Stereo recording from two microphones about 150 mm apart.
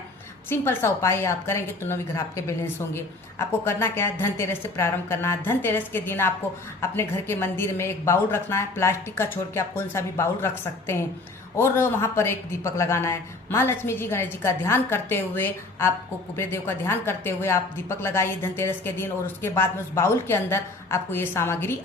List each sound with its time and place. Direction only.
0.5 s a woman's voice: 15° left (ahead or behind)